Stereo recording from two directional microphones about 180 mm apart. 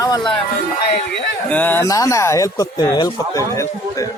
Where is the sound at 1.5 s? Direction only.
10° left (ahead or behind).